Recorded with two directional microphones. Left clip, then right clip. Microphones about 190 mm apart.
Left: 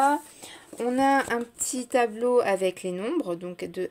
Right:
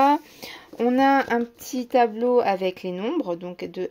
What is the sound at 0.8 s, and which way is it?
Speech, 25° right (ahead or behind).